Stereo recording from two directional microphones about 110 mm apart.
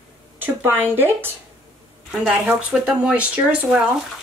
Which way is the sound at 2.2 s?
10° right (ahead or behind).